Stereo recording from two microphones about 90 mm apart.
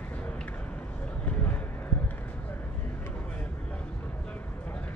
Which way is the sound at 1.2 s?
20° left (ahead or behind).